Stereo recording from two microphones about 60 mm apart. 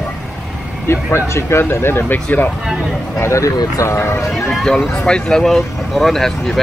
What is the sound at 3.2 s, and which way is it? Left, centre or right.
Speech, left.